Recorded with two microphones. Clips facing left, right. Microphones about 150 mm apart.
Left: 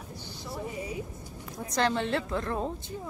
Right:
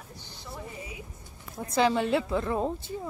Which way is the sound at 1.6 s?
5° right (ahead or behind).